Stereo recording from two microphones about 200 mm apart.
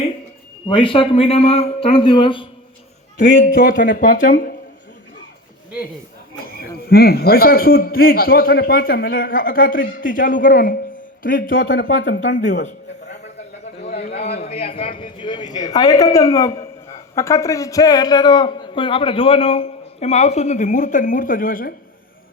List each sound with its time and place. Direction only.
0.7 s a man's voice: 25° left (ahead or behind)
3.2 s speech: 65° left (ahead or behind)
3.5 s a man's voice: 45° left (ahead or behind)
6.4 s a man's voice: 50° left (ahead or behind)
11.6 s speech: 65° left (ahead or behind)
13.9 s a man's voice: 30° left (ahead or behind)